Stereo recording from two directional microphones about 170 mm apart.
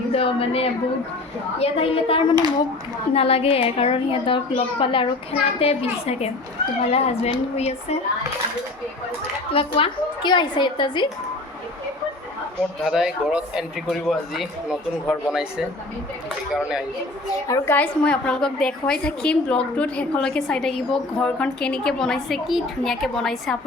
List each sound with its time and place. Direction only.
0.1 s a woman's voice: 35° left (ahead or behind)
9.5 s a woman's voice: 35° left (ahead or behind)
12.8 s a woman's voice: centre (ahead or behind)
17.5 s a woman's voice: 10° left (ahead or behind)